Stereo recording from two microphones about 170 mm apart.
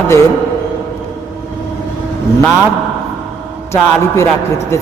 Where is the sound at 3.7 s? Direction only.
15° left (ahead or behind).